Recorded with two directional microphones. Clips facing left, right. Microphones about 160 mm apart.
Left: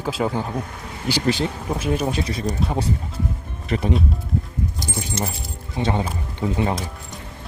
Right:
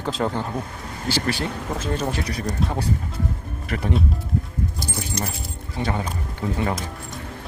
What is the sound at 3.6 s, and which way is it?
Speech, 20° left (ahead or behind).